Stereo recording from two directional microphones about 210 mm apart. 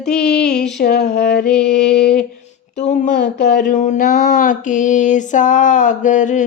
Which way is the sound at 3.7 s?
35° left (ahead or behind).